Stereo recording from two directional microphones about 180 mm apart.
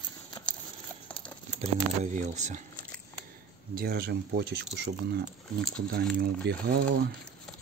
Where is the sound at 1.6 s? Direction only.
40° right (ahead or behind).